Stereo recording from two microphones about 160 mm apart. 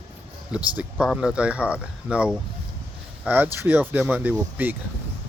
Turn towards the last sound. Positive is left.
turn(degrees=-10)  # may be behind; listen again after turning